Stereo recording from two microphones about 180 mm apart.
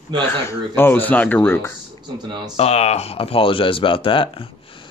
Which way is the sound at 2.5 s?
35° left (ahead or behind).